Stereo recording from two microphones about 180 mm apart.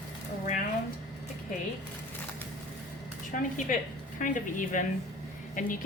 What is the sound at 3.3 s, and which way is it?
A woman's voice, 45° left (ahead or behind).